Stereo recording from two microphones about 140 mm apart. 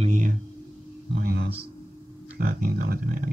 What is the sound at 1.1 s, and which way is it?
Speech, 90° right.